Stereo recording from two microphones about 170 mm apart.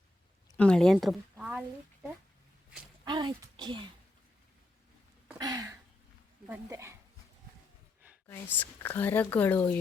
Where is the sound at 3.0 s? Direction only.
25° right (ahead or behind).